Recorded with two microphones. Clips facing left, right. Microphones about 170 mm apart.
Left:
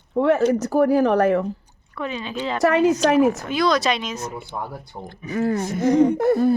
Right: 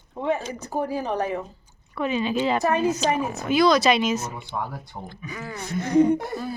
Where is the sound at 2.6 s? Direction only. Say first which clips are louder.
Left 5 dB; 90° left.